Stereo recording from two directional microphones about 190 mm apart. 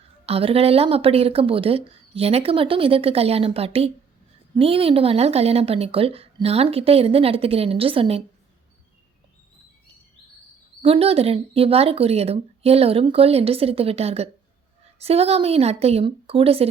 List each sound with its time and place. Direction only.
0.3 s speech: 30° right (ahead or behind)
10.8 s speech: 30° right (ahead or behind)